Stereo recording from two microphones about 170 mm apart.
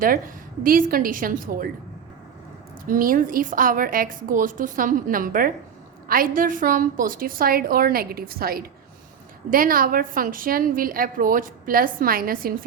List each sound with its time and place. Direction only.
0.0 s a woman's voice: 55° right (ahead or behind)
2.8 s a woman's voice: 55° right (ahead or behind)